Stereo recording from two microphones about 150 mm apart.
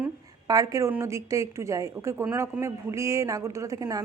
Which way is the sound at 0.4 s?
25° right (ahead or behind).